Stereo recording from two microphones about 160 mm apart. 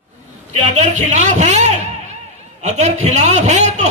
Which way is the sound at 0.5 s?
50° right (ahead or behind).